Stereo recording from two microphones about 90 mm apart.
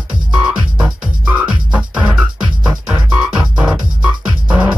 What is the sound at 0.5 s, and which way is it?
Music, 15° right (ahead or behind).